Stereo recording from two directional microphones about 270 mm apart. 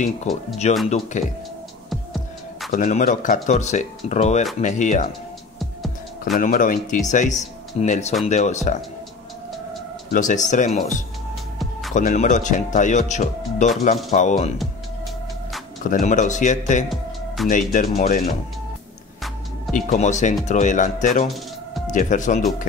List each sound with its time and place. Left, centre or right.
0.0 s speech: left
1.9 s music: centre
2.7 s speech: left
5.6 s music: centre
6.4 s speech: left
10.1 s speech: left
15.8 s speech: left
19.7 s speech: left